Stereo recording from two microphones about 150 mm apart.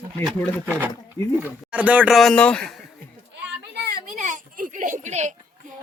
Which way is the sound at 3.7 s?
90° right.